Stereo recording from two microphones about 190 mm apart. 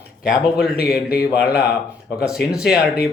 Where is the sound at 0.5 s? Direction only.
55° left (ahead or behind).